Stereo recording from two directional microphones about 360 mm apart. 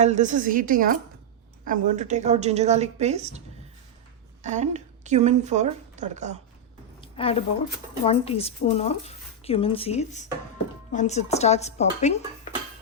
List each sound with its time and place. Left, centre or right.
0.0 s a woman's voice: centre
4.4 s a woman's voice: centre
7.0 s a sound: centre
8.0 s speech: centre